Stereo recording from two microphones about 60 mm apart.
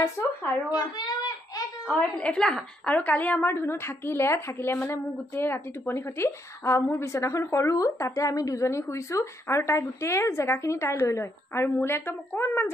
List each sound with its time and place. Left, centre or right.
0.2 s speech: left
0.7 s a sound: left
2.1 s a woman's voice: left
2.9 s a woman's voice: left
3.4 s a woman's voice: left